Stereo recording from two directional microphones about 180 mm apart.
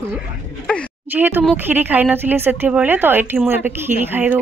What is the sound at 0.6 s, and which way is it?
Speech, 5° left (ahead or behind).